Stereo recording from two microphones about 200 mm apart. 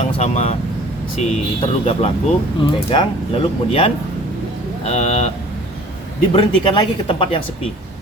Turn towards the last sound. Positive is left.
turn(degrees=25)  # may be behind; listen again after turning